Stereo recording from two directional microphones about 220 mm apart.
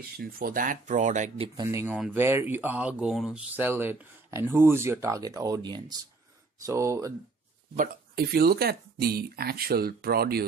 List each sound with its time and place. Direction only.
0.2 s speech: 40° right (ahead or behind)
1.6 s speech: 10° right (ahead or behind)
7.7 s speech: 40° right (ahead or behind)